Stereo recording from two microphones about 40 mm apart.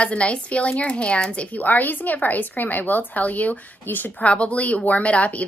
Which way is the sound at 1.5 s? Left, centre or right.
Left.